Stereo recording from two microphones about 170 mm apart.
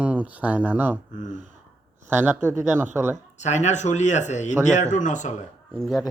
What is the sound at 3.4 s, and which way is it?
Speech, 40° left (ahead or behind).